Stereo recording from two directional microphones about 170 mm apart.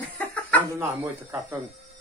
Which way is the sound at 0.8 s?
15° right (ahead or behind).